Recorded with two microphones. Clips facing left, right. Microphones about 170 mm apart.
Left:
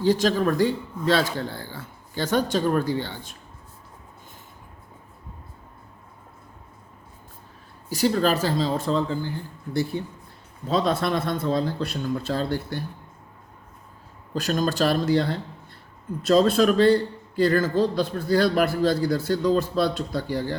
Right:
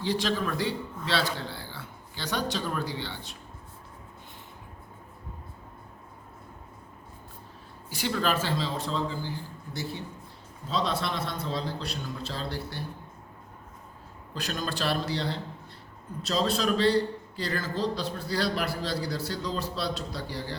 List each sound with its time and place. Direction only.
0.0 s a man's voice: 45° left (ahead or behind)
7.9 s speech: 40° left (ahead or behind)
10.7 s a man's voice: 50° left (ahead or behind)
14.3 s a man's voice: 45° left (ahead or behind)